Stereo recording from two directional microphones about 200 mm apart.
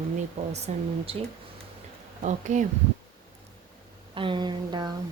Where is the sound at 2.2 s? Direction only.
40° right (ahead or behind).